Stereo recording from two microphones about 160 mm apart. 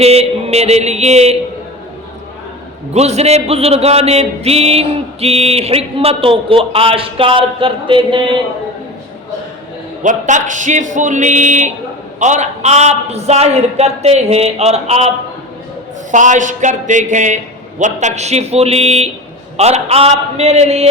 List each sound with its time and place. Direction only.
0.0 s music: 40° right (ahead or behind)
2.9 s music: 40° right (ahead or behind)
10.0 s a man's voice: 50° right (ahead or behind)
16.1 s a man's voice: 50° right (ahead or behind)
19.5 s music: 40° right (ahead or behind)